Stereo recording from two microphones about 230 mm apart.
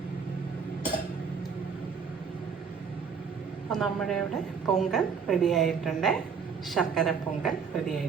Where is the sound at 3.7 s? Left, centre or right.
Centre.